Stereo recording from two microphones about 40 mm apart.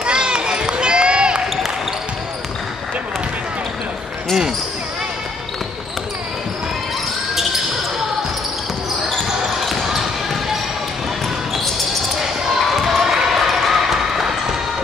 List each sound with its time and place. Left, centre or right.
0.0 s run: right
12.2 s basketball bounce: centre